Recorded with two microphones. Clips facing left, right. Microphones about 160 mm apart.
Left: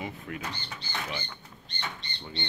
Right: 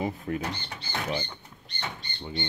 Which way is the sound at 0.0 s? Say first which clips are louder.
Right 7 dB; 35° right (ahead or behind).